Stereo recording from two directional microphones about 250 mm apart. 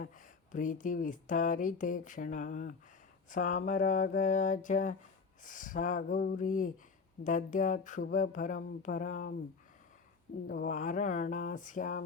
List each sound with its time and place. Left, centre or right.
0.0 s speech: left
10.4 s speech: left